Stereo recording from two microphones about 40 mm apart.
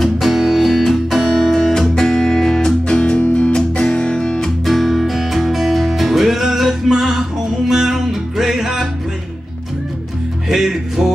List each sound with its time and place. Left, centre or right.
0.0 s music: centre
2.9 s guitar: left
4.6 s music: centre
10.5 s music: centre